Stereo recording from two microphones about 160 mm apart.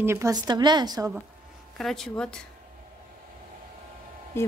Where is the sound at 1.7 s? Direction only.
Centre (ahead or behind).